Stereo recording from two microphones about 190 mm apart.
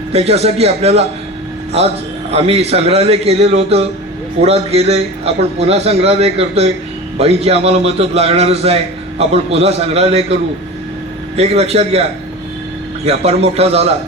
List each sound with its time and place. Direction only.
0.1 s a man's voice: 35° right (ahead or behind)
2.3 s a man's voice: 35° right (ahead or behind)
11.3 s a man's voice: 35° right (ahead or behind)
13.1 s a man's voice: 35° right (ahead or behind)